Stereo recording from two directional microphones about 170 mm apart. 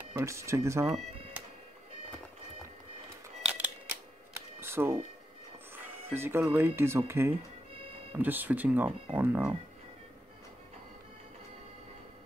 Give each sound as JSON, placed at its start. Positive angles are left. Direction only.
{"t": 0.1, "sound": "speech", "side_deg": -15}
{"t": 3.4, "sound": "camera", "side_deg": -10}
{"t": 4.6, "sound": "music", "side_deg": -15}
{"t": 5.8, "sound": "speech", "side_deg": -10}
{"t": 7.7, "sound": "music", "side_deg": -35}
{"t": 8.1, "sound": "speech", "side_deg": -10}